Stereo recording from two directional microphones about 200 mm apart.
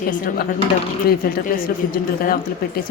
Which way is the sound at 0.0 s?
45° left (ahead or behind).